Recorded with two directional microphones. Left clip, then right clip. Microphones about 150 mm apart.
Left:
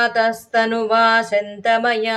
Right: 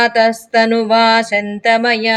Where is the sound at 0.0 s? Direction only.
30° right (ahead or behind).